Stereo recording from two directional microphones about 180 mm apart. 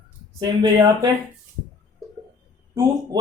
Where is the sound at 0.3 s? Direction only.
25° right (ahead or behind).